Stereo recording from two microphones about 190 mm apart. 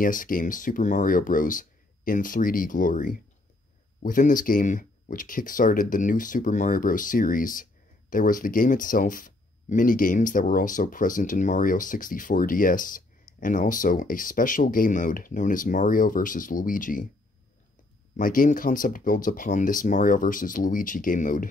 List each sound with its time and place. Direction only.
0.0 s speech: 45° left (ahead or behind)
18.1 s speech: 45° left (ahead or behind)